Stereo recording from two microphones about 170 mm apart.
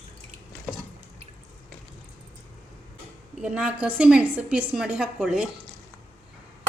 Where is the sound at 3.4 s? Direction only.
5° right (ahead or behind).